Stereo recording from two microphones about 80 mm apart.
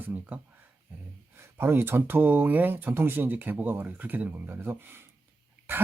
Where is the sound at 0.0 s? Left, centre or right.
Centre.